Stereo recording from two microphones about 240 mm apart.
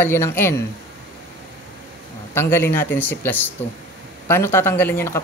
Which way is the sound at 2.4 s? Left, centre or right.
Centre.